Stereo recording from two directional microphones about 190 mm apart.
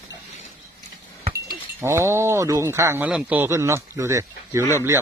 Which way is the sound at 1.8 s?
15° right (ahead or behind).